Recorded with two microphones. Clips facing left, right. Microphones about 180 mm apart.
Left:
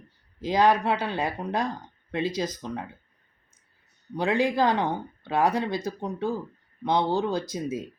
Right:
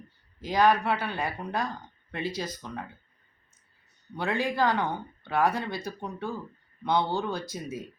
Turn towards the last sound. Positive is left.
turn(degrees=20)  # may be behind; listen again after turning